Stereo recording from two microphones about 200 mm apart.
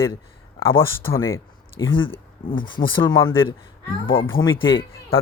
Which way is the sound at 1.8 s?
75° left (ahead or behind).